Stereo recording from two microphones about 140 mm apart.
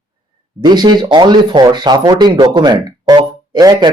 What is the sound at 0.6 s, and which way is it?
Speech, 30° right (ahead or behind).